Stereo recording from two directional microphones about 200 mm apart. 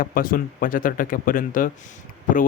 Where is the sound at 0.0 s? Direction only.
45° left (ahead or behind).